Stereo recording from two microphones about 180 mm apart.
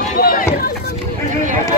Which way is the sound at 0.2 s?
50° left (ahead or behind).